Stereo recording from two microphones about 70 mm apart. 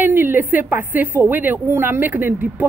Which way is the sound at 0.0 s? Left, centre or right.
Right.